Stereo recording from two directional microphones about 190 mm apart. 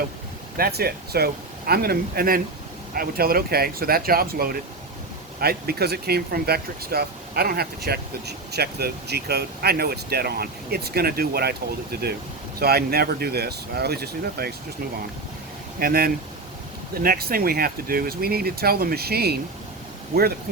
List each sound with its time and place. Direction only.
0.5 s speech: 55° right (ahead or behind)
15.8 s speech: 50° right (ahead or behind)